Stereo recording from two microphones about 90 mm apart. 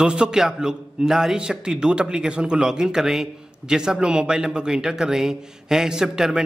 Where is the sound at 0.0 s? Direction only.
10° right (ahead or behind).